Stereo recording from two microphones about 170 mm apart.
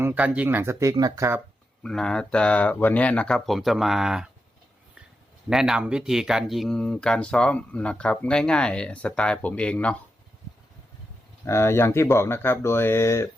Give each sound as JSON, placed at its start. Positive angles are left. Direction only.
{"t": 0.0, "sound": "speech", "side_deg": -10}
{"t": 1.8, "sound": "speech", "side_deg": 5}
{"t": 5.5, "sound": "speech", "side_deg": -5}
{"t": 11.4, "sound": "speech", "side_deg": 15}